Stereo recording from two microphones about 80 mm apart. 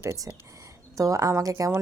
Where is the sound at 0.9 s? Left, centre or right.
Right.